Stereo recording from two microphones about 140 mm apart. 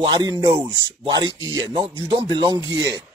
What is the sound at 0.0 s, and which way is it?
Speech, 30° right (ahead or behind).